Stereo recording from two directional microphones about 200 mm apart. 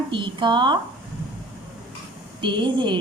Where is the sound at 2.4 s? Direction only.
25° right (ahead or behind).